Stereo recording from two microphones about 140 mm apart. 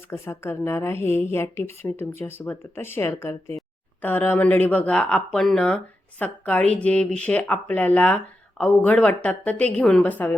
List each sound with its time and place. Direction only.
0.1 s speech: 15° left (ahead or behind)